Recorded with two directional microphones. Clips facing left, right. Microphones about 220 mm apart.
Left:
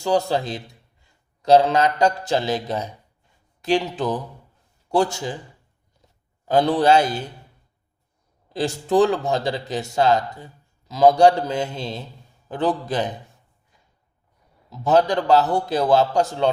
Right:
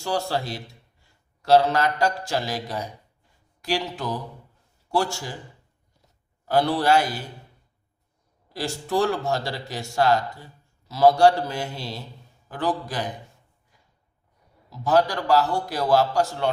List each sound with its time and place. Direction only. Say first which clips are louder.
0.0 s speech: left 6 dB; 20° left (ahead or behind)
6.5 s speech: left 4 dB; 20° left (ahead or behind)
8.5 s speech: left 6 dB; 20° left (ahead or behind)
14.7 s speech: left 3 dB; 20° left (ahead or behind)